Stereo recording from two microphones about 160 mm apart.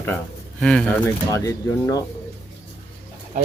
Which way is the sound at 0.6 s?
5° left (ahead or behind).